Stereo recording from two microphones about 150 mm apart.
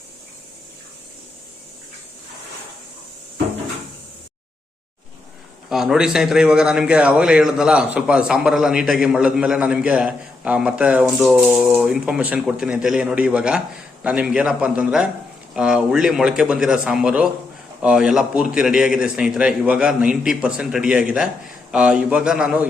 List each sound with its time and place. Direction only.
5.6 s a man's voice: centre (ahead or behind)